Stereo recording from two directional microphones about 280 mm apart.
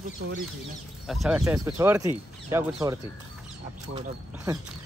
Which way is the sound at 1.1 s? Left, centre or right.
Centre.